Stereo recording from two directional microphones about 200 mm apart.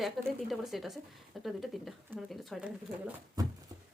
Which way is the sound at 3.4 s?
20° right (ahead or behind).